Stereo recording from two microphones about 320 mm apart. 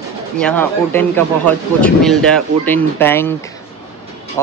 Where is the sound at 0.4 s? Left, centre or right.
Centre.